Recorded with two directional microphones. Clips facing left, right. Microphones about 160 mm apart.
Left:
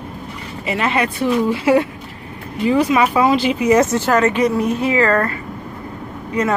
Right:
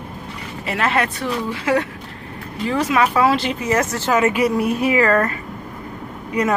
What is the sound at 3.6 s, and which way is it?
Speech, 20° left (ahead or behind).